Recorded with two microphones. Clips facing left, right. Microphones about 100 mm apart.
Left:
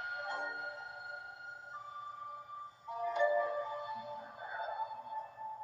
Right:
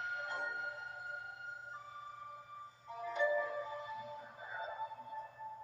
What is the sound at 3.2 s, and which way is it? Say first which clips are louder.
Music: left 2 dB; 35° left (ahead or behind).